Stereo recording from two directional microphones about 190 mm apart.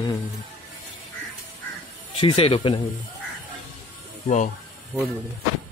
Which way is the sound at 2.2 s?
30° left (ahead or behind).